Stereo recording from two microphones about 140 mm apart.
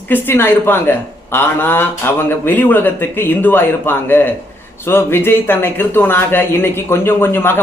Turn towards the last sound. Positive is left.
turn(degrees=15)  # may be behind; listen again after turning